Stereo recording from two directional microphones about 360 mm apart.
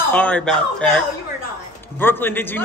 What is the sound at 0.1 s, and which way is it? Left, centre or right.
A man's voice, centre.